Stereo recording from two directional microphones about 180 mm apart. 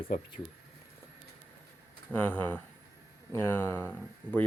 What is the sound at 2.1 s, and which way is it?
Speech, 10° left (ahead or behind).